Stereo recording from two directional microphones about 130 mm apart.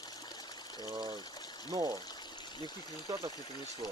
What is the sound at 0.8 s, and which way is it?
Speech, 30° right (ahead or behind).